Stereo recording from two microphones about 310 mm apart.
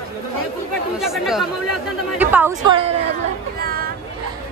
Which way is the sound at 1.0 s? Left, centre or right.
Centre.